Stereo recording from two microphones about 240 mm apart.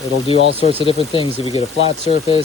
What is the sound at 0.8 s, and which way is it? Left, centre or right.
Speech, left.